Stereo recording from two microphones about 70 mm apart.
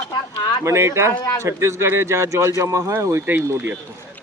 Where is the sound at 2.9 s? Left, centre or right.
Right.